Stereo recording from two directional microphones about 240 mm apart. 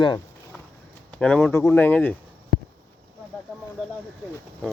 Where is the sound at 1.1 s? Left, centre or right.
Centre.